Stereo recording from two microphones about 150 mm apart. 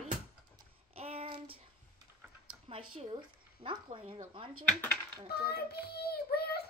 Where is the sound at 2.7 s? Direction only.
40° right (ahead or behind).